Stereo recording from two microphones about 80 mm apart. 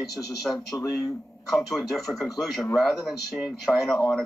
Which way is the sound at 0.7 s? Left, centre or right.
Left.